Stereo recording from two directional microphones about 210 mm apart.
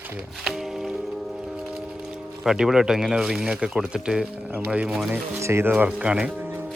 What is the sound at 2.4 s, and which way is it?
Speech, 5° right (ahead or behind).